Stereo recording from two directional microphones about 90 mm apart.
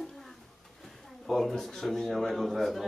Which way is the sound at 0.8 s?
Centre (ahead or behind).